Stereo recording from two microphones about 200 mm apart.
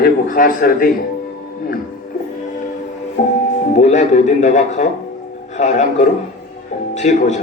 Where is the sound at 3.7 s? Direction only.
35° left (ahead or behind).